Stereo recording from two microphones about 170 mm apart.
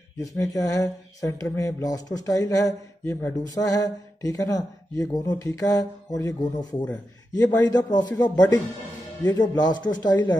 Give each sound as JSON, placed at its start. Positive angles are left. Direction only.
{"t": 0.2, "sound": "speech", "side_deg": 20}